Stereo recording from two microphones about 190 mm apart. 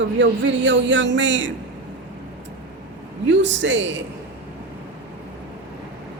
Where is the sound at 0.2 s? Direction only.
75° right (ahead or behind).